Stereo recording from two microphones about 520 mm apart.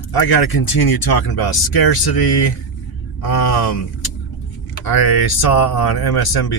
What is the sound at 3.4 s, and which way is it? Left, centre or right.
Speech, left.